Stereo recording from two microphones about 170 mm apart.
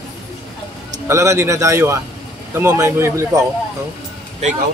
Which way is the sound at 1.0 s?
15° right (ahead or behind).